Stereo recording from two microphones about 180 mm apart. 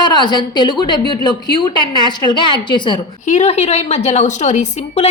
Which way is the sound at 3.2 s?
40° left (ahead or behind).